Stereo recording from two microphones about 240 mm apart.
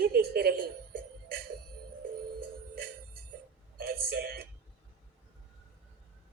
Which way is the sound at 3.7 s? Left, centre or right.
Right.